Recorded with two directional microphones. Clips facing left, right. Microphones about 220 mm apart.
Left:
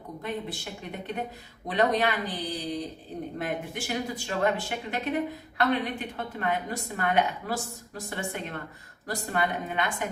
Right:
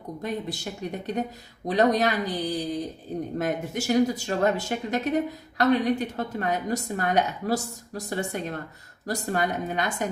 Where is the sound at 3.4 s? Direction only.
40° right (ahead or behind).